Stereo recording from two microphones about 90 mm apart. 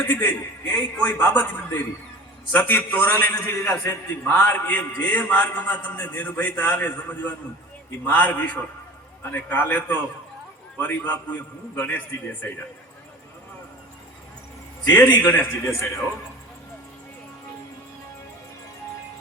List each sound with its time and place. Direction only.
0.1 s a man's voice: 20° left (ahead or behind)
0.7 s a man's voice: 10° left (ahead or behind)
14.9 s a man's voice: 20° left (ahead or behind)